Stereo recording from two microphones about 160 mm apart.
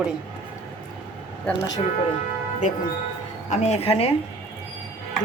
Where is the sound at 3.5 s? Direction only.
45° left (ahead or behind).